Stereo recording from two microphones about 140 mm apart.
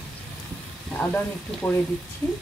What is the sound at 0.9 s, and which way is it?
Speech, 10° left (ahead or behind).